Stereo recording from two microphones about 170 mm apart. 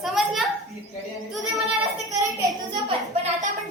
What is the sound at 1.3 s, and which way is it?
Child singing, centre (ahead or behind).